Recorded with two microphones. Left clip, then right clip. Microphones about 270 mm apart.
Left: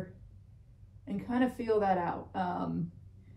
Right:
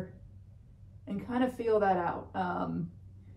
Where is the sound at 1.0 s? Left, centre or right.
Centre.